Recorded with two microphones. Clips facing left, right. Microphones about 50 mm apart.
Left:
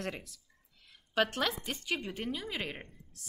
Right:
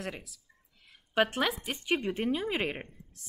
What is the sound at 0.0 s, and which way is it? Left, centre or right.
Speech, centre.